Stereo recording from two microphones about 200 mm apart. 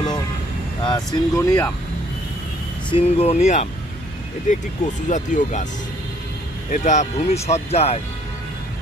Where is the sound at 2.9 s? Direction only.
30° left (ahead or behind).